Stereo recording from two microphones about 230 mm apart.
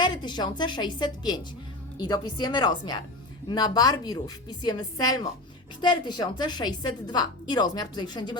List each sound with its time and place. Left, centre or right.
0.0 s a woman's voice: centre